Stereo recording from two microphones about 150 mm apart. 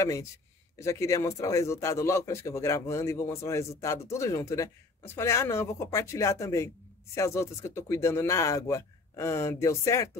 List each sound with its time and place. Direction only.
0.0 s a man's voice: 20° left (ahead or behind)